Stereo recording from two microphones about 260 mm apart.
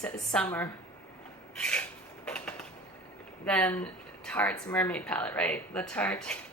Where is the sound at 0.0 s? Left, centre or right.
Centre.